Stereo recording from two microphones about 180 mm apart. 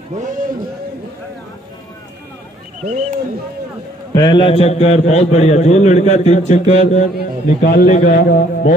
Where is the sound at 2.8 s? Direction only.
40° right (ahead or behind).